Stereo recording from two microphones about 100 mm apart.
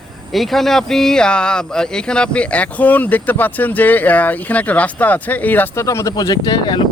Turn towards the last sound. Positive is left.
turn(degrees=50)  # may be behind; listen again after turning